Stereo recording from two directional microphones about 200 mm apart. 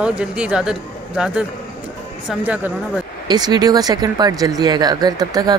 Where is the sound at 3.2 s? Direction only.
20° right (ahead or behind).